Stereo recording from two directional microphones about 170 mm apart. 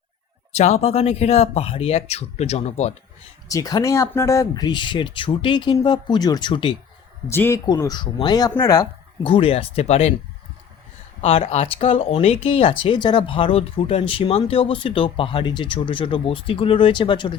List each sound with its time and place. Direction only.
0.5 s speech: 40° left (ahead or behind)
3.5 s speech: 20° left (ahead or behind)
7.3 s speech: 15° left (ahead or behind); by 10.2 s 40° left (ahead or behind)
11.2 s speech: 35° left (ahead or behind)